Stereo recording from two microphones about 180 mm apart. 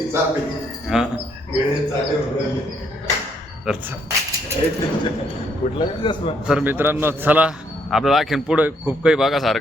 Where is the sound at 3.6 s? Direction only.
5° right (ahead or behind).